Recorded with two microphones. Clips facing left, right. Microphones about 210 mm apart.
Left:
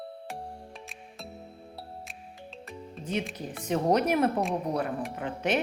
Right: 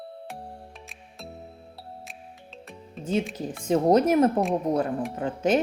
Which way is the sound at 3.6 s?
30° right (ahead or behind).